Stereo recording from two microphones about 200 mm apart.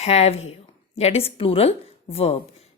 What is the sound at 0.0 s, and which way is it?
A woman's voice, 30° left (ahead or behind).